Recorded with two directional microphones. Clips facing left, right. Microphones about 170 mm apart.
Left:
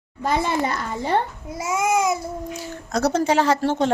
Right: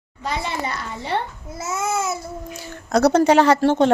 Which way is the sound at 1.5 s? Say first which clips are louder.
Left 3 dB; 10° left (ahead or behind).